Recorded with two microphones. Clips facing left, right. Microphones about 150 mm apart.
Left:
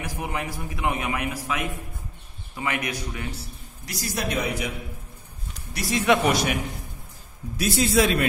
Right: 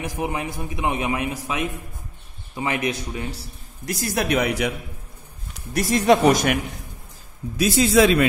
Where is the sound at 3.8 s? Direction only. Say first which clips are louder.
Right 6 dB; 50° right (ahead or behind); by 4.7 s 75° right (ahead or behind).